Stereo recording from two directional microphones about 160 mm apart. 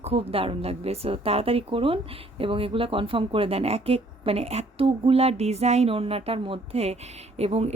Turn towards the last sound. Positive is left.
turn(degrees=-40)  # may be behind; listen again after turning